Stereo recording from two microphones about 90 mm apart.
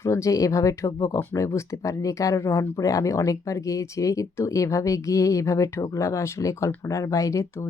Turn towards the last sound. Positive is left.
turn(degrees=35)  # may be behind; listen again after turning